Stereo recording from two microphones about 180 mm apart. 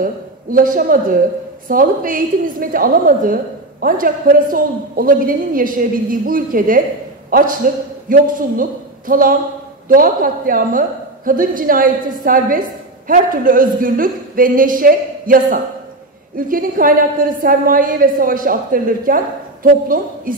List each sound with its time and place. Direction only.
0.0 s a woman's voice: 50° right (ahead or behind)